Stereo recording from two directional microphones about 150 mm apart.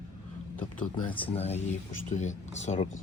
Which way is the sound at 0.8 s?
10° left (ahead or behind).